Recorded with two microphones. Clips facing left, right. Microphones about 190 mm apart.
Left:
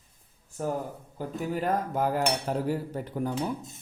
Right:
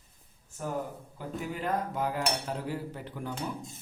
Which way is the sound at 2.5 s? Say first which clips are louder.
Left 6 dB; 45° left (ahead or behind).